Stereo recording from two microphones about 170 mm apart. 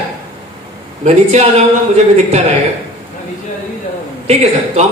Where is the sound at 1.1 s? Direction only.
40° right (ahead or behind).